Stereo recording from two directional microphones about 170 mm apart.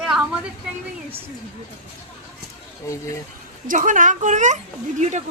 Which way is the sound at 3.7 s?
50° right (ahead or behind).